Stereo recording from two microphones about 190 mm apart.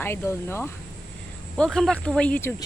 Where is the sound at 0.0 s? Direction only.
10° left (ahead or behind).